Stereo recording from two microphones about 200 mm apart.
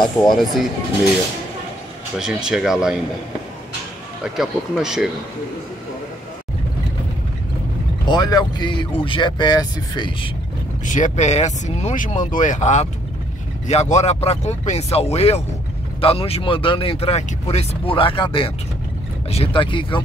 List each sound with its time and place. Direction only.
0.2 s speech: 20° left (ahead or behind)
2.1 s speech: centre (ahead or behind)
4.2 s speech: 5° right (ahead or behind)
8.1 s speech: 20° left (ahead or behind)
10.9 s speech: 40° left (ahead or behind)